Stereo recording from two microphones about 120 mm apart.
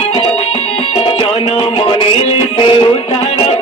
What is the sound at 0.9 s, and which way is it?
Music, 50° left (ahead or behind).